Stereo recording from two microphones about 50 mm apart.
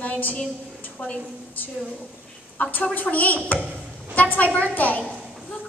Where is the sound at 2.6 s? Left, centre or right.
Left.